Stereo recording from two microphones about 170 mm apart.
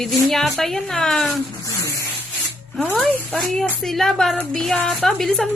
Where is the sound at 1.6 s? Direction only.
20° left (ahead or behind).